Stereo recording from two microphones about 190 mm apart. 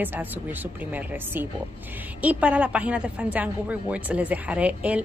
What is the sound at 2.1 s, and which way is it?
A woman's voice, 5° right (ahead or behind).